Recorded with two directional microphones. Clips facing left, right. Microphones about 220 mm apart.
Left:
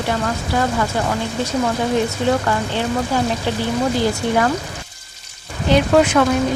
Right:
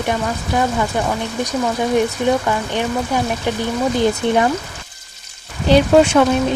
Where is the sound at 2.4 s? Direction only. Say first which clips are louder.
Right 1 dB; 15° right (ahead or behind).